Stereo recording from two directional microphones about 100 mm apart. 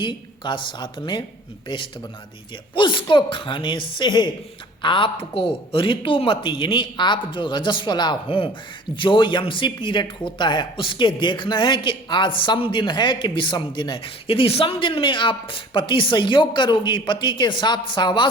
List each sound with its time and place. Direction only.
0.0 s speech: 55° left (ahead or behind)